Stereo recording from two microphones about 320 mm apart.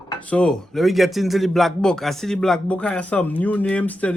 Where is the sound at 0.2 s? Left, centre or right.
Centre.